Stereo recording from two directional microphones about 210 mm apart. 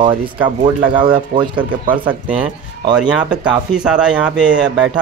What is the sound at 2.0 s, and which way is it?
Speech, 10° right (ahead or behind).